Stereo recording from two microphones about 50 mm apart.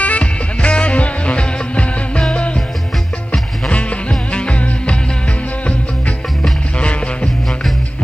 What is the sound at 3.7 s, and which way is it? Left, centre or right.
Music, left.